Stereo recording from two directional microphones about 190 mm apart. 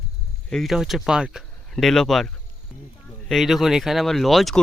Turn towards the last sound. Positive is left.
turn(degrees=0)  # may be behind; listen again after turning